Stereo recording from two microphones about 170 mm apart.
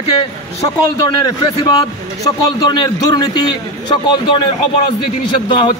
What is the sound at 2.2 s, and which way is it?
A man's voice, 25° left (ahead or behind).